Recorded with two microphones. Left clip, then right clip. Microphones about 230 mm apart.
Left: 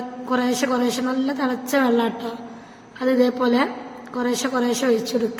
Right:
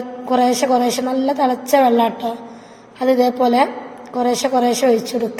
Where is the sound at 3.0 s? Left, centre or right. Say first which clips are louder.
Right 4 dB; left.